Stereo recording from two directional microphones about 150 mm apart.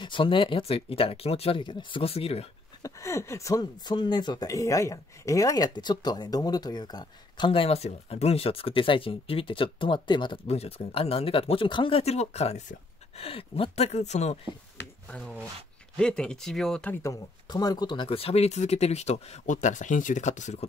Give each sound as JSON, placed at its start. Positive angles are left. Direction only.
{"t": 0.0, "sound": "speech", "side_deg": 35}
{"t": 2.8, "sound": "speech", "side_deg": 20}
{"t": 15.0, "sound": "speech", "side_deg": 10}
{"t": 17.0, "sound": "speech", "side_deg": 25}